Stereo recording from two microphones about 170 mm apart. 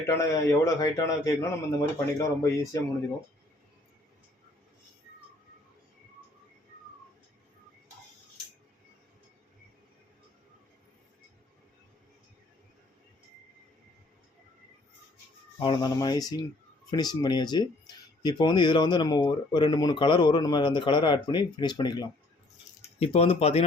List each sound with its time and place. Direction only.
0.1 s a man's voice: 20° left (ahead or behind)
15.6 s speech: 25° left (ahead or behind)
22.8 s speech: 35° left (ahead or behind)